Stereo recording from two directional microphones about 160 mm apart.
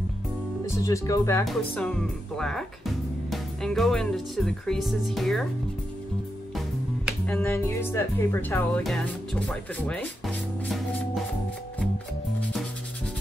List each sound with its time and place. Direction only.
0.7 s speech: 20° left (ahead or behind)
1.4 s speech: 5° left (ahead or behind)
7.2 s speech: 15° left (ahead or behind)